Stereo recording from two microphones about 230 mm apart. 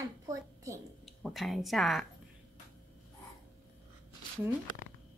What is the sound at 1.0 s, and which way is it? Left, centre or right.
Speech, centre.